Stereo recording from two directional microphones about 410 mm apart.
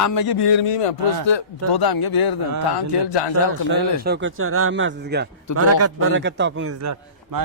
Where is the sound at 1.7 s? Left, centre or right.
Left.